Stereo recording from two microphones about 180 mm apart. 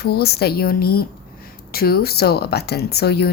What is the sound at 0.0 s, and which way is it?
Speech, 60° left (ahead or behind).